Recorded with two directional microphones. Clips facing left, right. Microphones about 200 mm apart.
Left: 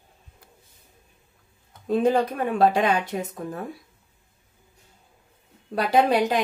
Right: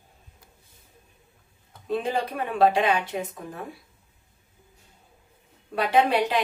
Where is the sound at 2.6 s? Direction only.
40° left (ahead or behind).